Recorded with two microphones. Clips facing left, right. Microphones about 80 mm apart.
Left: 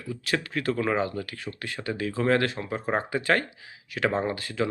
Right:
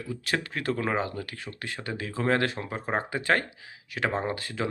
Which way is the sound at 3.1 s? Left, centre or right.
Right.